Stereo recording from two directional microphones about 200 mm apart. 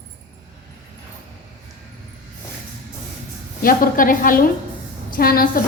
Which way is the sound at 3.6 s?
45° left (ahead or behind).